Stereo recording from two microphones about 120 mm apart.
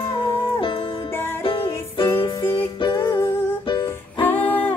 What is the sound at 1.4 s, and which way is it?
Music, 45° left (ahead or behind).